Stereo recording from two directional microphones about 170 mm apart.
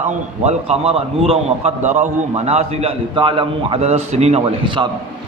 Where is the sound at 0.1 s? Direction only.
40° right (ahead or behind).